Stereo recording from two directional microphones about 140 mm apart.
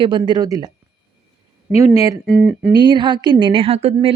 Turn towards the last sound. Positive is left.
turn(degrees=-45)  # may be behind; listen again after turning